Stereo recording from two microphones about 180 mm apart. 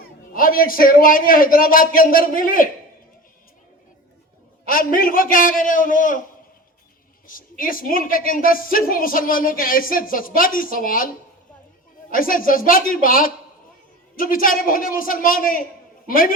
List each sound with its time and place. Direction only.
0.3 s a woman's voice: 50° left (ahead or behind)
4.6 s a woman's voice: 50° left (ahead or behind)
7.3 s a woman's voice: 50° left (ahead or behind)
12.1 s a woman's voice: 50° left (ahead or behind)